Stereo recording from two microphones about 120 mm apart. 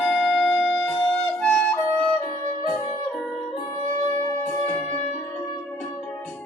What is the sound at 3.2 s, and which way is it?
Music, centre (ahead or behind).